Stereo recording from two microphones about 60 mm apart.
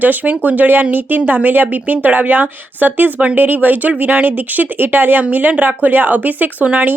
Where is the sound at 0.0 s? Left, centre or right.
Right.